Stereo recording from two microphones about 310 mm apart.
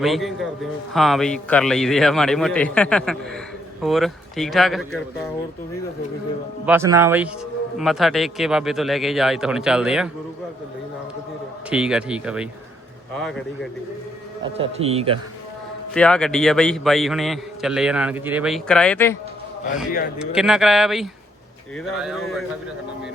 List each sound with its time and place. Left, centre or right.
0.0 s a man's voice: centre
6.7 s a man's voice: centre
11.7 s a man's voice: centre
14.4 s speech: centre
16.0 s a man's voice: centre
20.1 s a man's voice: centre